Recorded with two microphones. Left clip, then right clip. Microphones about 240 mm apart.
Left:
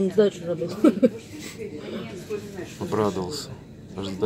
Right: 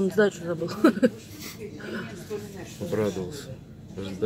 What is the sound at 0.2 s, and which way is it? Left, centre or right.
Speech, right.